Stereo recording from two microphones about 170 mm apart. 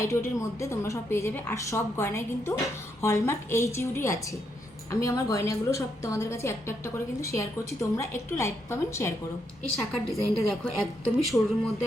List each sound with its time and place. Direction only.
0.0 s a woman's voice: 15° left (ahead or behind)
10.1 s a woman's voice: centre (ahead or behind)